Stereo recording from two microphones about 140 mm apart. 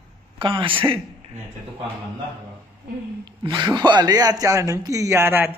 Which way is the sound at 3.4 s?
30° right (ahead or behind).